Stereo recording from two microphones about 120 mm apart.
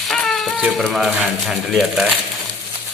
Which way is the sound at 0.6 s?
Centre (ahead or behind).